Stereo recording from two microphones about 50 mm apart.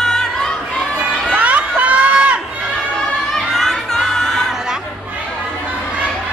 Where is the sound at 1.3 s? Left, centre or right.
Right.